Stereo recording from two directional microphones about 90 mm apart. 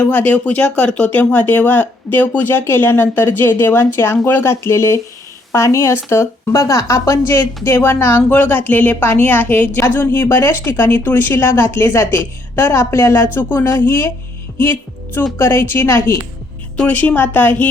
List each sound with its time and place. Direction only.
0.0 s speech: 20° left (ahead or behind)
16.7 s speech: 15° left (ahead or behind)